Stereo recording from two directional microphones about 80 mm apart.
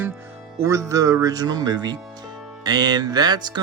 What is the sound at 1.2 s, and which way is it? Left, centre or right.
A man's voice, right.